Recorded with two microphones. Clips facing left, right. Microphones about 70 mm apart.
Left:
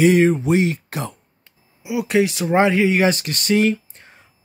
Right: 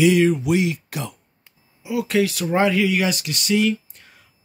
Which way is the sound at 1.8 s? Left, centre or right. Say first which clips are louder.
Left 2 dB; left.